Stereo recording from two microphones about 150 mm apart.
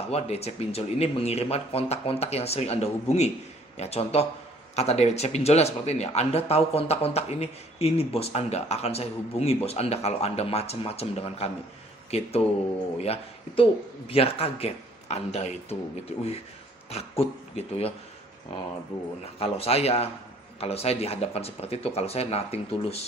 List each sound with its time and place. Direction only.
0.1 s speech: 45° left (ahead or behind)
16.9 s speech: 40° left (ahead or behind)
19.4 s speech: 40° left (ahead or behind)